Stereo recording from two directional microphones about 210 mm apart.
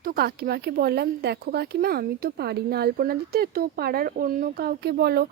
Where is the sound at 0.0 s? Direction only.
45° right (ahead or behind).